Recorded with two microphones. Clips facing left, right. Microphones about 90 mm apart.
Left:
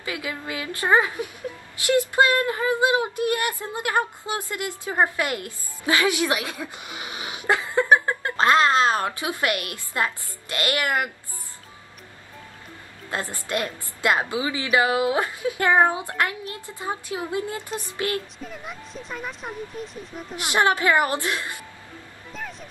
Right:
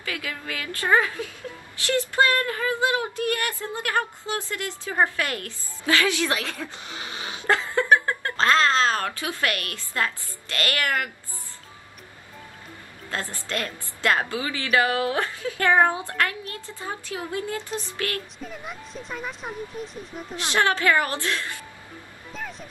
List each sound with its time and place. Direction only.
0.0 s a woman's voice: 20° left (ahead or behind)
13.1 s a woman's voice: 20° left (ahead or behind)
18.4 s speech: centre (ahead or behind)
20.3 s a woman's voice: 15° left (ahead or behind)
22.3 s music: centre (ahead or behind)